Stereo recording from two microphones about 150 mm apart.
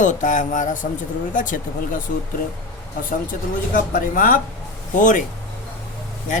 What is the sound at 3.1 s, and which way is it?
Speech, 65° left (ahead or behind).